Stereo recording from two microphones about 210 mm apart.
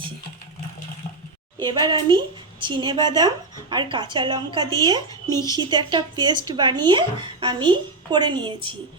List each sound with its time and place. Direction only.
1.6 s a woman's voice: 20° right (ahead or behind)
5.3 s speech: 15° left (ahead or behind)
5.5 s a woman's voice: 20° right (ahead or behind)